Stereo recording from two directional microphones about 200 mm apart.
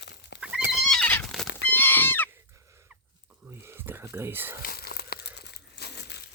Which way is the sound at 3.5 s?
10° right (ahead or behind).